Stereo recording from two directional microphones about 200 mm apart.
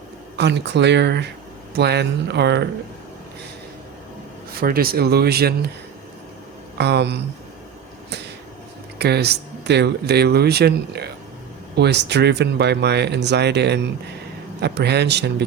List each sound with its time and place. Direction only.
0.3 s speech: 60° right (ahead or behind)
4.5 s speech: 45° right (ahead or behind)
6.7 s speech: 55° right (ahead or behind)
9.0 s speech: 55° right (ahead or behind)